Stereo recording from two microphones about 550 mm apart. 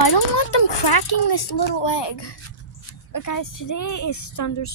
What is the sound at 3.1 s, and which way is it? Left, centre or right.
A woman's voice, left.